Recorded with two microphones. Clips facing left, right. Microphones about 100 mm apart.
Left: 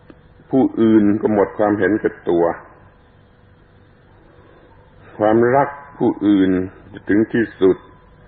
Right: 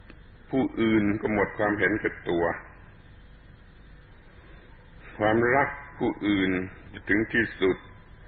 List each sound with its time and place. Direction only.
0.1 s a sound: 35° left (ahead or behind)
1.1 s a man's voice: 40° left (ahead or behind)
5.0 s a man's voice: 35° left (ahead or behind)